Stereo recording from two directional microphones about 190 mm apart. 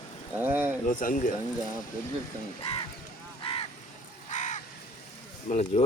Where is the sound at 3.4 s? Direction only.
30° left (ahead or behind).